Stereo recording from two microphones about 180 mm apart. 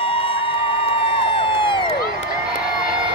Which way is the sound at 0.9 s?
30° left (ahead or behind).